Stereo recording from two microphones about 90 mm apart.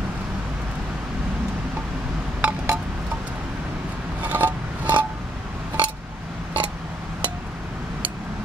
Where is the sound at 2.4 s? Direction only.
15° right (ahead or behind).